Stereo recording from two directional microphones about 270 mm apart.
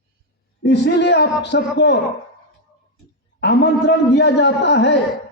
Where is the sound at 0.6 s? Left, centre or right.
Left.